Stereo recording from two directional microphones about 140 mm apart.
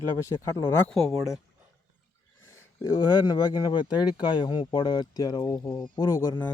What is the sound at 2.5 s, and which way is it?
Speech, 25° left (ahead or behind).